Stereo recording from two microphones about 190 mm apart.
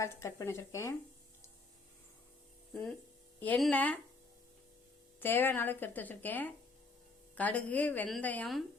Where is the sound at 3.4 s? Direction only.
5° left (ahead or behind).